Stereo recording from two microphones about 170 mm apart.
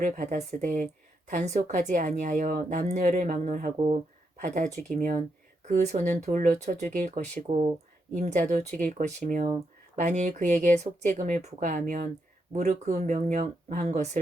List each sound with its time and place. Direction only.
0.0 s a woman's voice: 50° right (ahead or behind)
3.8 s a woman's voice: 35° right (ahead or behind)